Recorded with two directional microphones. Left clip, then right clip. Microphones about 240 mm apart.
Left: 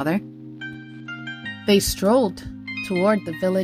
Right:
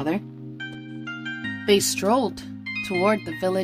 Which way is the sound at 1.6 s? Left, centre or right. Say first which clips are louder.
Left 1 dB; centre.